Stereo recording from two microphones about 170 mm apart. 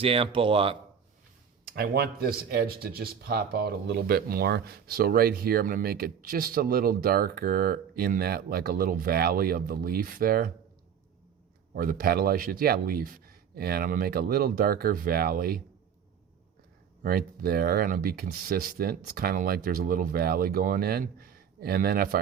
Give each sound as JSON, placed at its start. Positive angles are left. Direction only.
{"t": 0.0, "sound": "speech", "side_deg": -35}
{"t": 1.7, "sound": "speech", "side_deg": -65}
{"t": 11.7, "sound": "speech", "side_deg": -55}
{"t": 17.0, "sound": "speech", "side_deg": -60}